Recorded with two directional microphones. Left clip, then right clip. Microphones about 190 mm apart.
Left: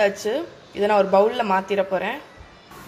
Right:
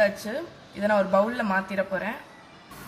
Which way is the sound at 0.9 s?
30° left (ahead or behind).